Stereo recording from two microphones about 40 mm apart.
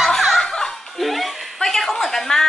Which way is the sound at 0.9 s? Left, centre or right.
Centre.